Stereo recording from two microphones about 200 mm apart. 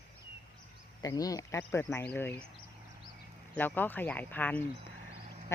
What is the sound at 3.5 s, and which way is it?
Speech, 10° left (ahead or behind).